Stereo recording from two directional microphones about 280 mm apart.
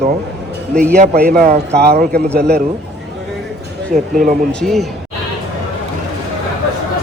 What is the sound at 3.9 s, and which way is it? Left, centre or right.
Speech, right.